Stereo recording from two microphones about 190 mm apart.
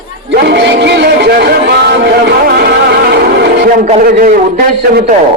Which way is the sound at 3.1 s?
60° right (ahead or behind).